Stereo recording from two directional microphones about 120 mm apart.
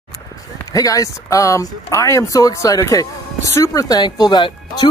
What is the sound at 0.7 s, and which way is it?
Speech, 30° left (ahead or behind).